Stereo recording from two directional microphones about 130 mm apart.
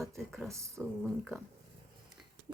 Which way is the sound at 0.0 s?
Centre (ahead or behind).